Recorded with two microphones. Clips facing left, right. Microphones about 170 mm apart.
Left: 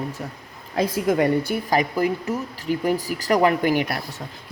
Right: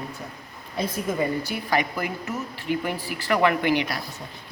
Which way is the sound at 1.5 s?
40° left (ahead or behind).